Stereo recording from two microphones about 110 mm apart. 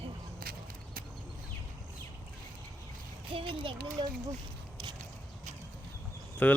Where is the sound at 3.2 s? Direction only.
50° right (ahead or behind).